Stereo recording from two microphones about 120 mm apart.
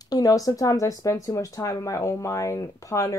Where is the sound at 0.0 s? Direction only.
30° left (ahead or behind).